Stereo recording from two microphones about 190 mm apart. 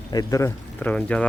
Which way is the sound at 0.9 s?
5° left (ahead or behind).